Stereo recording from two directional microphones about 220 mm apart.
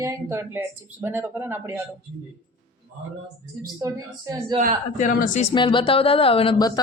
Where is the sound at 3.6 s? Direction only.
15° right (ahead or behind).